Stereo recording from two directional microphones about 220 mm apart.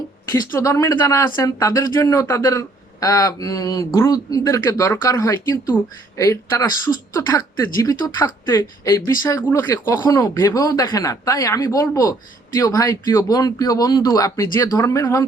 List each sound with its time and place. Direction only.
0.3 s speech: 15° left (ahead or behind)